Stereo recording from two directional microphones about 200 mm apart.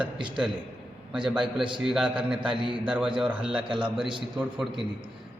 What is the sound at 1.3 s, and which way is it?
A man's voice, 5° right (ahead or behind).